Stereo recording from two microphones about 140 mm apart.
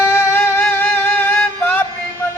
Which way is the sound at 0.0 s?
15° left (ahead or behind).